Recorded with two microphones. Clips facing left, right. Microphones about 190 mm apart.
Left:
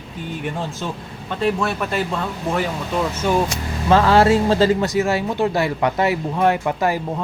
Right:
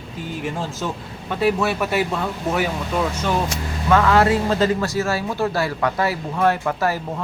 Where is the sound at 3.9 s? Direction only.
30° left (ahead or behind).